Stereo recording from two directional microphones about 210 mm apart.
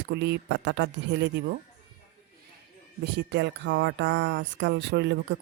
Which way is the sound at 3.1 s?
55° right (ahead or behind).